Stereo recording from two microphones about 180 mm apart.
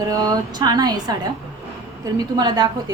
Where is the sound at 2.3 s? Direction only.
25° right (ahead or behind).